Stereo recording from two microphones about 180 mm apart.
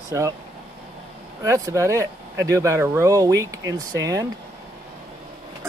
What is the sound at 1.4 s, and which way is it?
Speech, 15° right (ahead or behind).